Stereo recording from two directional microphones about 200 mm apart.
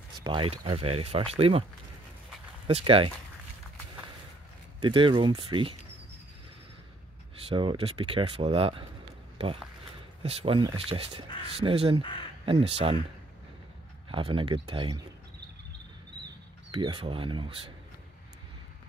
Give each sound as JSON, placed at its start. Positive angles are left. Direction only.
{"t": 0.2, "sound": "speech", "side_deg": -25}
{"t": 2.6, "sound": "speech", "side_deg": -25}
{"t": 4.7, "sound": "speech", "side_deg": -25}
{"t": 7.4, "sound": "speech", "side_deg": -25}
{"t": 10.2, "sound": "speech", "side_deg": -30}
{"t": 12.0, "sound": "speech", "side_deg": 25}
{"t": 12.4, "sound": "speech", "side_deg": -30}
{"t": 14.0, "sound": "speech", "side_deg": -25}
{"t": 16.7, "sound": "speech", "side_deg": -25}